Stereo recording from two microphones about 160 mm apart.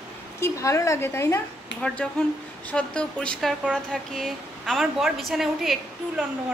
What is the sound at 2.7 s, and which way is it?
Speech, 5° left (ahead or behind).